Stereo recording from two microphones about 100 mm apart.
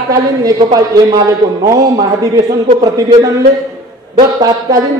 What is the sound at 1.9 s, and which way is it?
A man's voice, 40° right (ahead or behind).